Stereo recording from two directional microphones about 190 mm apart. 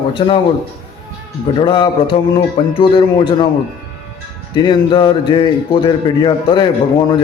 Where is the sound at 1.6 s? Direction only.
25° left (ahead or behind).